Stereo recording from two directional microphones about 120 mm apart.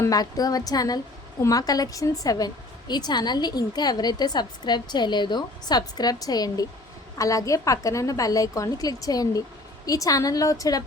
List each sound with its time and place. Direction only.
0.0 s a woman's voice: 30° left (ahead or behind)